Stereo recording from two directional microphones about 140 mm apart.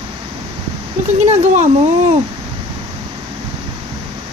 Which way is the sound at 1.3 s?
55° right (ahead or behind).